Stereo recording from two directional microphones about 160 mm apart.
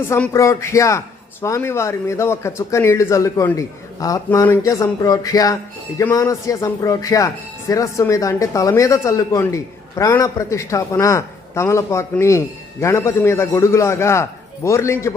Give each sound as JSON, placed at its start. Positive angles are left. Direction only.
{"t": 0.1, "sound": "a man's voice", "side_deg": 20}